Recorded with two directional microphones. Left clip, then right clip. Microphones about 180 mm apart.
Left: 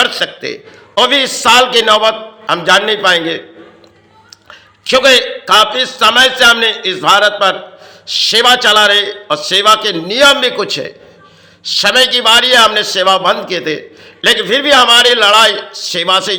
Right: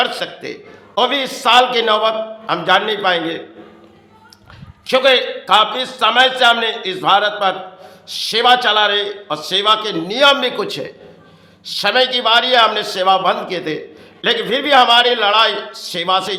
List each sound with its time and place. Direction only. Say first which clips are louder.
0.0 s a man's voice: left 6 dB; 15° left (ahead or behind)
4.9 s a man's voice: left 5 dB; 15° left (ahead or behind)